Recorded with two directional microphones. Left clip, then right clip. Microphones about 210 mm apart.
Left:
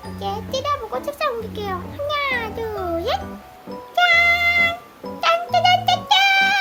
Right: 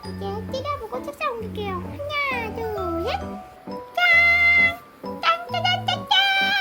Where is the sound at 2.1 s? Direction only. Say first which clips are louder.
Left 3 dB; 90° left.